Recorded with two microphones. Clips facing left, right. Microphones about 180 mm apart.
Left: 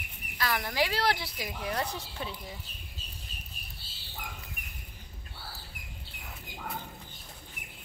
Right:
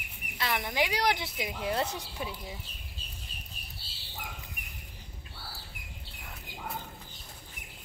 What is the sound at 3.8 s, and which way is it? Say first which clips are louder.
Bird: right 1 dB; 50° left (ahead or behind).